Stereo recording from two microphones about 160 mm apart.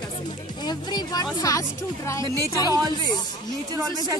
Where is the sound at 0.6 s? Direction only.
25° left (ahead or behind).